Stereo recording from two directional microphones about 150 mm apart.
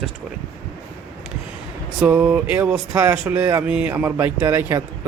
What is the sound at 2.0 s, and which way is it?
Speech, 10° right (ahead or behind).